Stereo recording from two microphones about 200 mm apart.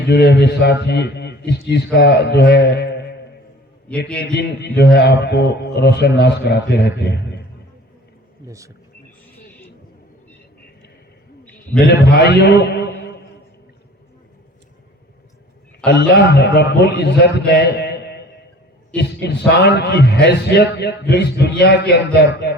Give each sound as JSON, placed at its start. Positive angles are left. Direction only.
{"t": 0.1, "sound": "a man's voice", "side_deg": 55}
{"t": 4.2, "sound": "a man's voice", "side_deg": 55}
{"t": 8.4, "sound": "speech", "side_deg": -15}
{"t": 11.9, "sound": "a man's voice", "side_deg": 55}
{"t": 16.0, "sound": "a man's voice", "side_deg": 55}